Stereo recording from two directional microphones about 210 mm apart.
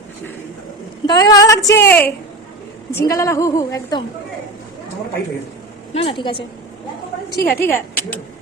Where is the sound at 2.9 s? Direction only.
15° left (ahead or behind).